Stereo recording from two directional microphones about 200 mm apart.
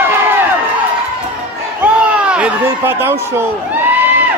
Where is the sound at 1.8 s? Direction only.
5° right (ahead or behind).